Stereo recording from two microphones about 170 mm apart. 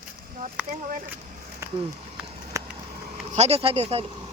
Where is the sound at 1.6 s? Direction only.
15° right (ahead or behind).